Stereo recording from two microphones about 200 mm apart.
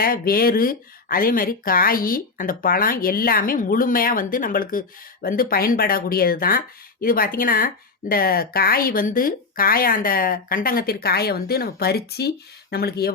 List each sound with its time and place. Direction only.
0.0 s speech: 45° left (ahead or behind)